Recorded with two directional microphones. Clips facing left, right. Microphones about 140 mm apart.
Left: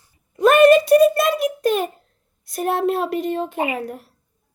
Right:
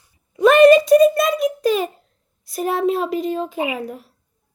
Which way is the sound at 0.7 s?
65° left (ahead or behind).